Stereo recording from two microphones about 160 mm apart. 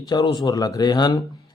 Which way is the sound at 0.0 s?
25° left (ahead or behind).